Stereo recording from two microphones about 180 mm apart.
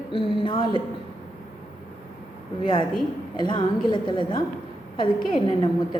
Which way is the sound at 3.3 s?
25° left (ahead or behind).